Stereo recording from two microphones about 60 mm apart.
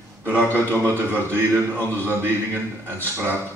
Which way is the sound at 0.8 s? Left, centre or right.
Right.